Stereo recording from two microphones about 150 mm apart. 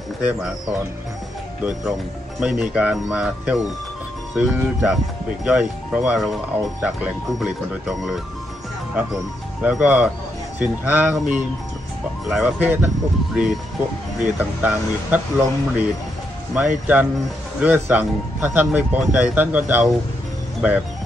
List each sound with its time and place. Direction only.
0.2 s speech: 5° right (ahead or behind)
1.6 s speech: 5° right (ahead or behind)
14.6 s speech: 10° right (ahead or behind)